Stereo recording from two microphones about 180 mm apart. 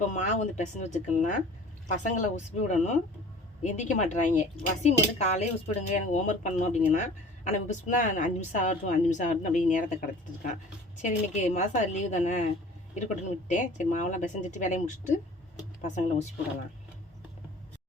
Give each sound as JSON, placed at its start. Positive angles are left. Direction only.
{"t": 0.1, "sound": "a woman's voice", "side_deg": 40}
{"t": 13.5, "sound": "a woman's voice", "side_deg": 40}